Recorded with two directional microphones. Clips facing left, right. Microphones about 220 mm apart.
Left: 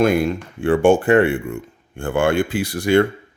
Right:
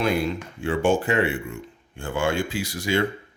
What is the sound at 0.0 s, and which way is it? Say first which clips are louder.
Speech: left 7 dB; 50° left (ahead or behind).